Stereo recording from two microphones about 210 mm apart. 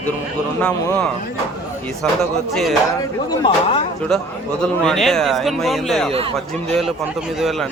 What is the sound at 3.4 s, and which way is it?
Speech, 25° left (ahead or behind).